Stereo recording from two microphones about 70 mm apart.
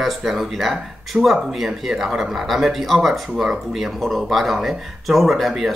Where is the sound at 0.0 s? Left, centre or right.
Centre.